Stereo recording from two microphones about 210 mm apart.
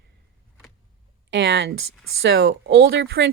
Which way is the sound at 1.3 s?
55° right (ahead or behind).